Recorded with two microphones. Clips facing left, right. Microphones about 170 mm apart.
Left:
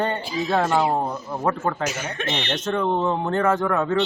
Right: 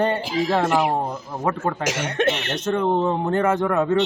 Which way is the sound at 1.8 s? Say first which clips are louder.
Right 4 dB; 90° right.